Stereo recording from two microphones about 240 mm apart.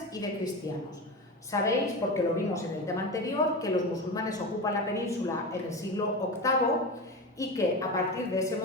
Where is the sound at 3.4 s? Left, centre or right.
Left.